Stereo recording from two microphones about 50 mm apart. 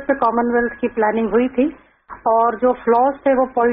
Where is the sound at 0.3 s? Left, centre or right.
Right.